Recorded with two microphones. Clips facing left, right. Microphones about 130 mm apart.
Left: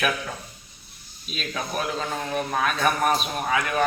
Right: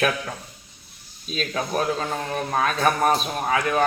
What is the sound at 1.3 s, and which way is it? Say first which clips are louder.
A man's voice: right 4 dB; 35° right (ahead or behind).